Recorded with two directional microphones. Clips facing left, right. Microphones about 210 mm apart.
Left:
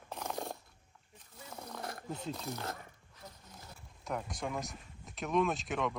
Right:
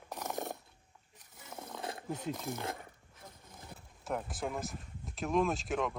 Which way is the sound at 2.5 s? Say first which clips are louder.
Right 2 dB; 25° right (ahead or behind).